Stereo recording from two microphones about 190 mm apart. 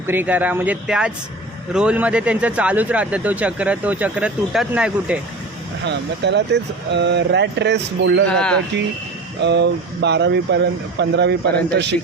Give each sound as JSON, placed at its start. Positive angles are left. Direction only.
{"t": 0.1, "sound": "speech", "side_deg": -10}
{"t": 5.8, "sound": "speech", "side_deg": -65}
{"t": 8.3, "sound": "speech", "side_deg": 5}
{"t": 9.4, "sound": "speech", "side_deg": -65}